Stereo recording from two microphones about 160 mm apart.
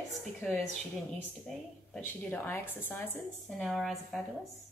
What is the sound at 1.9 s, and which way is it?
A woman's voice, 10° left (ahead or behind).